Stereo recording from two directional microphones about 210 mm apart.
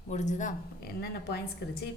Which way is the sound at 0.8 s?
50° left (ahead or behind).